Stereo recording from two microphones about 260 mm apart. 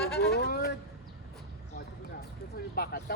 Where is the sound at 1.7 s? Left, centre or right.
Left.